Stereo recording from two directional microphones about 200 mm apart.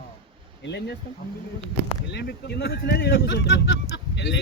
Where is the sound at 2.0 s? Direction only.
60° left (ahead or behind).